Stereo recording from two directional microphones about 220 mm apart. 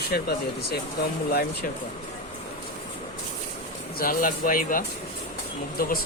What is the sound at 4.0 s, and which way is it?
Speech, 40° left (ahead or behind).